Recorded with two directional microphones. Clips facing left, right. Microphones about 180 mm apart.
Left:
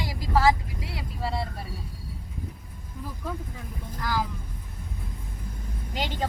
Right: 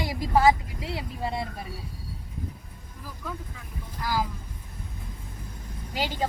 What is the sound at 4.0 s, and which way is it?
Speech, 10° right (ahead or behind).